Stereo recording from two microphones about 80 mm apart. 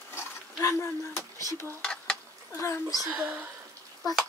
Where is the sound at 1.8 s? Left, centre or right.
Centre.